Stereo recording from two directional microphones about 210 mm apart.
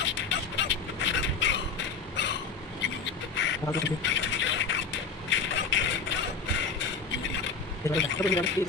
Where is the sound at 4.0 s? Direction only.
60° left (ahead or behind).